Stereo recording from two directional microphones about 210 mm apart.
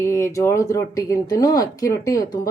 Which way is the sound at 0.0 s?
15° left (ahead or behind).